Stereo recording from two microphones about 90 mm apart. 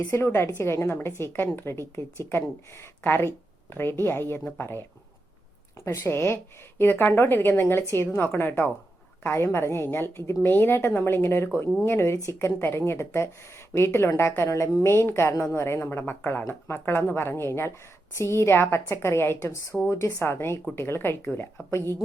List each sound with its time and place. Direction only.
0.1 s a woman's voice: 30° left (ahead or behind)